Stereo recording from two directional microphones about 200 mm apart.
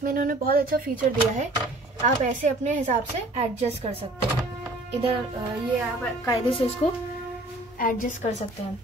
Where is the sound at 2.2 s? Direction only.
40° right (ahead or behind).